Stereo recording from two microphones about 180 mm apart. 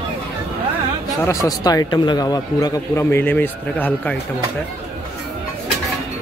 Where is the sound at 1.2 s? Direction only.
20° left (ahead or behind).